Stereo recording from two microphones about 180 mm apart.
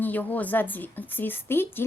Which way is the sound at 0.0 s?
10° left (ahead or behind).